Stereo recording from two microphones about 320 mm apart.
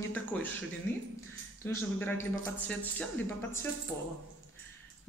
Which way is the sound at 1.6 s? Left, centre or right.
Centre.